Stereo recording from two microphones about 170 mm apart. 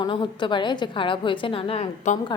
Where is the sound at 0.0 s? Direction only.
25° left (ahead or behind).